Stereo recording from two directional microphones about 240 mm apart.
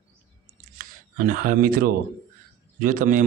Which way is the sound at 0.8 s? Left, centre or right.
Right.